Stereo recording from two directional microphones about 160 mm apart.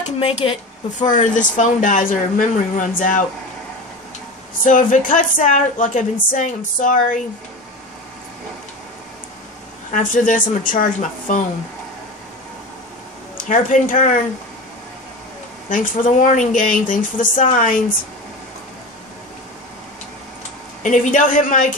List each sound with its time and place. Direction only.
0.0 s speech: 35° left (ahead or behind)
0.9 s speech: 50° left (ahead or behind)
4.6 s speech: 55° left (ahead or behind)
9.8 s speech: 55° left (ahead or behind)
13.5 s speech: 50° left (ahead or behind)
15.7 s speech: 55° left (ahead or behind)
20.8 s speech: 50° left (ahead or behind)